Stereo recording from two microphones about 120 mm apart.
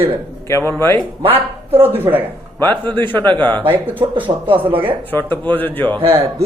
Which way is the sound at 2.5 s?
15° left (ahead or behind).